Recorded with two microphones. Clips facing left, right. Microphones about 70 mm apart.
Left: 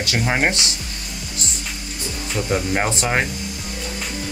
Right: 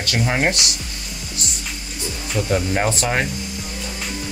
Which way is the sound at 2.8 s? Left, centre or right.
Left.